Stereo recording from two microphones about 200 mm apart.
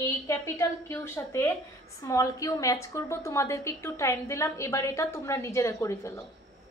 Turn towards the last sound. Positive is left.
turn(degrees=15)  # may be behind; listen again after turning